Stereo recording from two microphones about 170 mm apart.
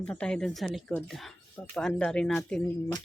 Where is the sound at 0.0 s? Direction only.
5° left (ahead or behind).